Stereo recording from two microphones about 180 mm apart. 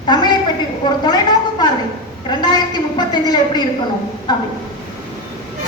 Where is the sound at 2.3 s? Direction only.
25° left (ahead or behind).